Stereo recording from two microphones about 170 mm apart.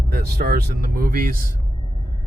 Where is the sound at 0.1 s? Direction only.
65° right (ahead or behind).